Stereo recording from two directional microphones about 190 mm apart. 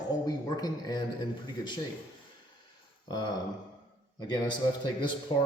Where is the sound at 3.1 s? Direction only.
20° left (ahead or behind).